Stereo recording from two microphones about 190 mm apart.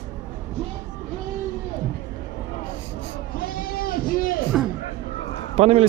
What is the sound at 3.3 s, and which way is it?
Sheep, 50° left (ahead or behind).